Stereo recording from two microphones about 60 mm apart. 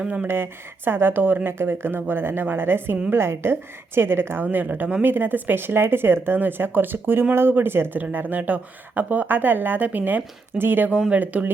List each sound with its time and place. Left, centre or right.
0.0 s speech: centre
0.3 s speech: right
4.4 s speech: right